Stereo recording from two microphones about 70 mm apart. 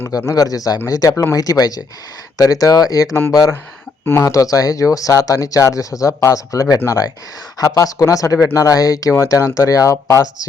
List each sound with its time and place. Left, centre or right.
0.3 s speech: left
1.1 s speech: left
1.4 s speech: left
4.0 s speech: left
4.3 s speech: left